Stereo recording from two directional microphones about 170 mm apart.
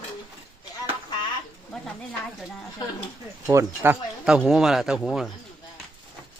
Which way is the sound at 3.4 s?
15° right (ahead or behind).